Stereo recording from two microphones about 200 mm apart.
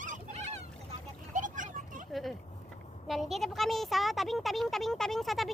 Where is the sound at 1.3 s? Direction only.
40° right (ahead or behind).